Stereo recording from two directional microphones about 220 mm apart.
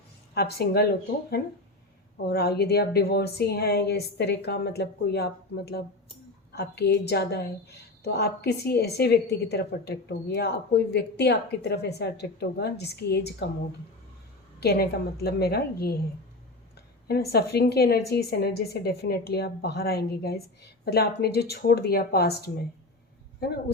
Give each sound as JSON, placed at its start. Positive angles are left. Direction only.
{"t": 0.3, "sound": "a woman's voice", "side_deg": 45}
{"t": 14.6, "sound": "a woman's voice", "side_deg": 45}
{"t": 17.1, "sound": "a woman's voice", "side_deg": 45}